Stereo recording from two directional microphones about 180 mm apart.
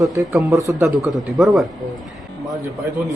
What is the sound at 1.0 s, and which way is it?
Speech, centre (ahead or behind).